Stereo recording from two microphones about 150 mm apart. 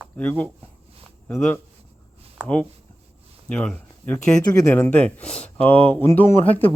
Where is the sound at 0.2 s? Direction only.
10° left (ahead or behind).